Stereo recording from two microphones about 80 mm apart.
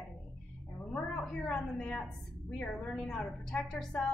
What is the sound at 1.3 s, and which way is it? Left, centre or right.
A woman's voice, centre.